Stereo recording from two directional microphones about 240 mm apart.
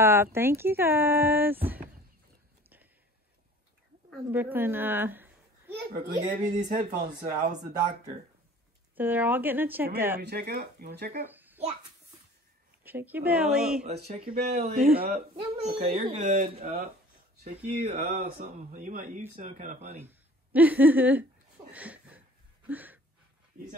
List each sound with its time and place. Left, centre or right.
0.0 s speech: centre
4.3 s speech: centre
5.7 s a child's voice: right
8.9 s speech: centre
10.2 s speech: right
11.2 s a sound: centre
12.8 s speech: centre
14.0 s a child's voice: right
14.6 s speech: right
15.3 s a child's voice: right
20.0 s speech: centre
21.7 s a sound: centre